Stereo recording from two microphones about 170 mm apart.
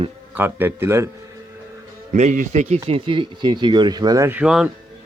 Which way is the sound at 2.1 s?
45° right (ahead or behind).